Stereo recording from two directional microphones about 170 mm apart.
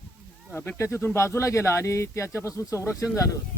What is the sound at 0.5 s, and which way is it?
Speech, 10° left (ahead or behind).